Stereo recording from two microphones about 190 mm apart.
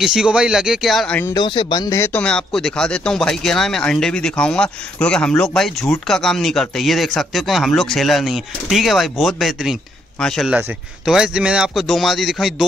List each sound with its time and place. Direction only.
0.0 s speech: 5° right (ahead or behind)
1.3 s speech: 25° left (ahead or behind); by 12.6 s centre (ahead or behind)